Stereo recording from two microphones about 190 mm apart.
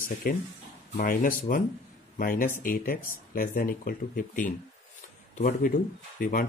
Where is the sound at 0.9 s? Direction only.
45° left (ahead or behind).